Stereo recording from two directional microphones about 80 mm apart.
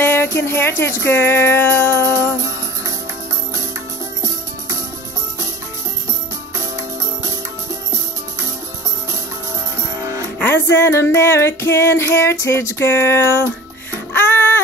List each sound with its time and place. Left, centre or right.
0.0 s music: left
10.4 s music: left